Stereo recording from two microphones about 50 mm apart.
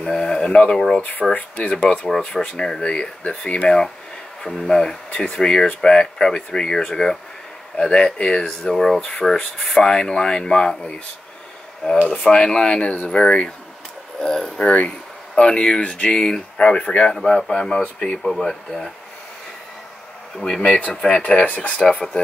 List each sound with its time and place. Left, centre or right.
0.1 s speech: centre
1.3 s speech: left
4.4 s speech: centre
12.1 s speech: centre
20.3 s speech: centre
21.5 s speech: left